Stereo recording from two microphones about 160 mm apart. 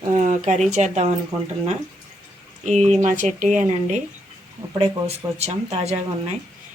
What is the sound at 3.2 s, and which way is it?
A woman's voice, 50° right (ahead or behind).